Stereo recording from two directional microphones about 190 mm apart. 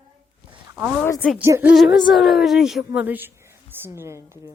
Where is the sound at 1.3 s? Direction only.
10° right (ahead or behind).